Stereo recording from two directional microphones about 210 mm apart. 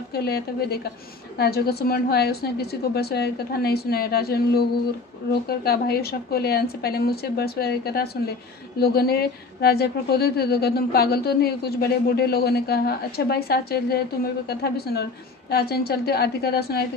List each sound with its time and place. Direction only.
0.1 s a woman's voice: 50° left (ahead or behind)